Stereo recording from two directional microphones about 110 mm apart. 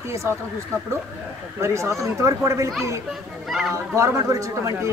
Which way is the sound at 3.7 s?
25° right (ahead or behind).